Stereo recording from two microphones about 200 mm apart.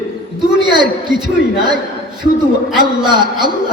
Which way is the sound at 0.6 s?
20° right (ahead or behind).